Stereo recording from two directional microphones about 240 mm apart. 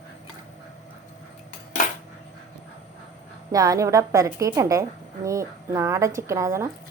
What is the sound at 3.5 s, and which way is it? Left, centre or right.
Speech, centre.